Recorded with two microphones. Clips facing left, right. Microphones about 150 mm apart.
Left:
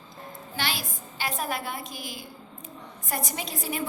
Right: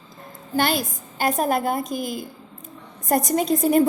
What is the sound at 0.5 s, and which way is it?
A woman's voice, 45° right (ahead or behind).